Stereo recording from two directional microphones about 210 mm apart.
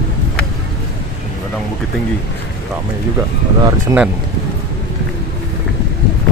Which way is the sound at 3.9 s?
15° right (ahead or behind).